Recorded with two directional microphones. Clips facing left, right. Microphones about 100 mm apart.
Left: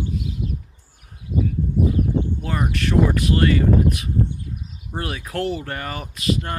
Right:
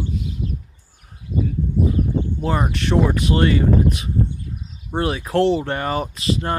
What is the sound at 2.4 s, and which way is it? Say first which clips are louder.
Speech: right 3 dB; 30° right (ahead or behind).